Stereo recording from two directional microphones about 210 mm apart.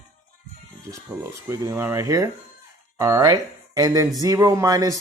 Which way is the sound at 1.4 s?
15° right (ahead or behind).